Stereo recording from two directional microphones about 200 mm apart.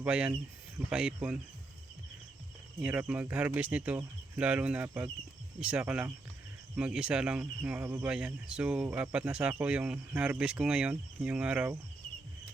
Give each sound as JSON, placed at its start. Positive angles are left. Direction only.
{"t": 0.0, "sound": "speech", "side_deg": -5}
{"t": 2.8, "sound": "speech", "side_deg": -5}